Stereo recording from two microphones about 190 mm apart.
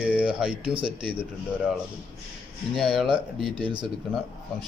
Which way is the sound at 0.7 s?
25° right (ahead or behind).